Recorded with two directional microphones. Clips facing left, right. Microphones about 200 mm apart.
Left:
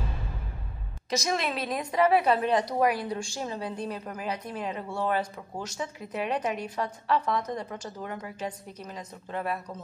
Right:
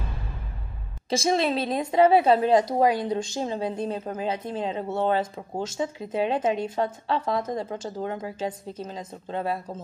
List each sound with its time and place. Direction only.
1.1 s a woman's voice: 30° right (ahead or behind)